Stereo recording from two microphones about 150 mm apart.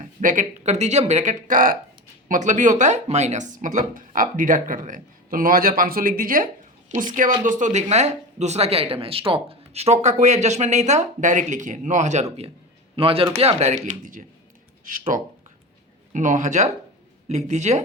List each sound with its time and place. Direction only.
0.0 s speech: 60° right (ahead or behind)
6.9 s speech: 55° right (ahead or behind)
13.0 s speech: 40° right (ahead or behind)